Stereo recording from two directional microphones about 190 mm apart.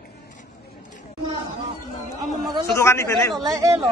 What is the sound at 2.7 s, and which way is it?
Speech, 15° left (ahead or behind).